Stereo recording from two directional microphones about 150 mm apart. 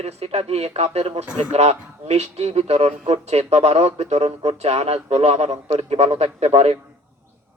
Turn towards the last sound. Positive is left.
turn(degrees=-45)  # may be behind; listen again after turning